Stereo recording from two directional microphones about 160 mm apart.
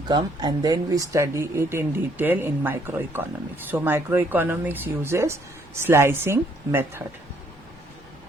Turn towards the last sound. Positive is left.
turn(degrees=-15)  # may be behind; listen again after turning